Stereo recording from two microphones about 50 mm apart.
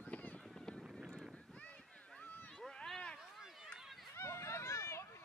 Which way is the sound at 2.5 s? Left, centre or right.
Centre.